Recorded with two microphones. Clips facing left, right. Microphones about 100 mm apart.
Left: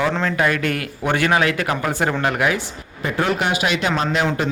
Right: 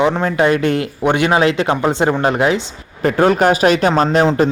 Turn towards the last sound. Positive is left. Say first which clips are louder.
# right 7 dB
turn(degrees=-35)  # may be behind; listen again after turning